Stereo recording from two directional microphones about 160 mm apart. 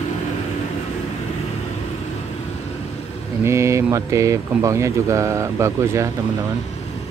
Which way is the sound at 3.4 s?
20° right (ahead or behind).